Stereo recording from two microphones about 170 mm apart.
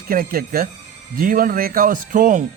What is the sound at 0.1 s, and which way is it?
Speech, 60° right (ahead or behind).